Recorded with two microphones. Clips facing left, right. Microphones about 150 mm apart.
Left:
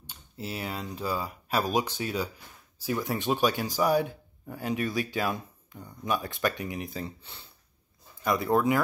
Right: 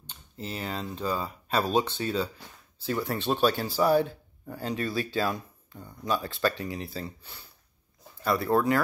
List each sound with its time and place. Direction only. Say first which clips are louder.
0.0 s speech: even; 10° left (ahead or behind)